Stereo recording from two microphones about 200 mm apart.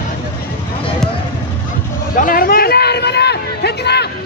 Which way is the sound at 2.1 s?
45° left (ahead or behind).